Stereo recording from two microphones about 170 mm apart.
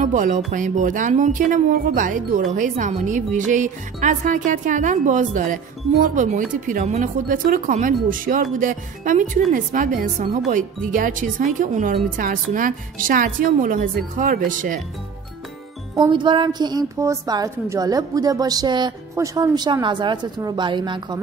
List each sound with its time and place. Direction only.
0.0 s music: 50° right (ahead or behind)
0.5 s speech: 50° right (ahead or behind)
16.0 s a woman's voice: 25° right (ahead or behind)